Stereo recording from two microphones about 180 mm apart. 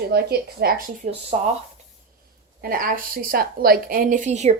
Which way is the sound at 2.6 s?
55° right (ahead or behind).